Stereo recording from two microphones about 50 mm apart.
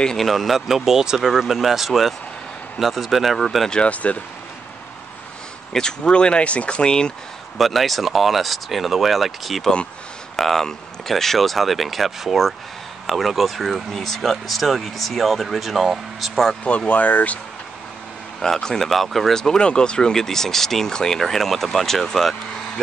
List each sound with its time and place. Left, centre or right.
0.2 s speech: centre
3.7 s speech: left
5.7 s speech: centre
7.5 s speech: centre
16.6 s speech: left
18.4 s speech: centre